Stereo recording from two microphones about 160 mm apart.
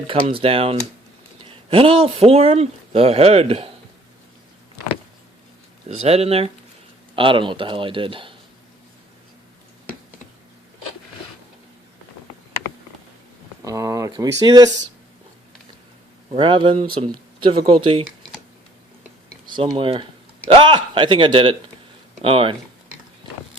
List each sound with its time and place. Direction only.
0.1 s speech: 35° right (ahead or behind)
6.0 s speech: 40° right (ahead or behind)
13.7 s speech: 20° right (ahead or behind)
16.3 s speech: 35° right (ahead or behind)
19.5 s speech: 30° right (ahead or behind)